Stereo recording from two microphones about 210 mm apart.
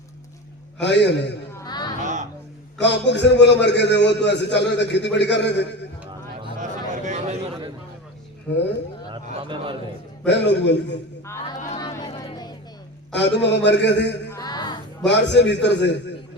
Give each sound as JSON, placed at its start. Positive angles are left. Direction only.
{"t": 0.8, "sound": "a man's voice", "side_deg": 55}
{"t": 1.5, "sound": "a sound", "side_deg": 20}
{"t": 2.8, "sound": "a man's voice", "side_deg": 55}
{"t": 6.6, "sound": "a sound", "side_deg": -35}
{"t": 9.0, "sound": "speech", "side_deg": -25}
{"t": 10.2, "sound": "a man's voice", "side_deg": 55}
{"t": 11.3, "sound": "speech", "side_deg": 15}
{"t": 11.8, "sound": "a sound", "side_deg": 20}
{"t": 13.1, "sound": "a man's voice", "side_deg": 55}
{"t": 14.3, "sound": "music", "side_deg": 15}
{"t": 15.0, "sound": "a man's voice", "side_deg": 55}